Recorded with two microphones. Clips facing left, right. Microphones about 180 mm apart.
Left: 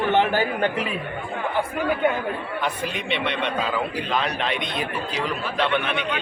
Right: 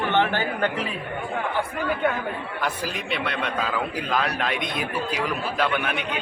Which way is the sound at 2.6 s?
Centre (ahead or behind).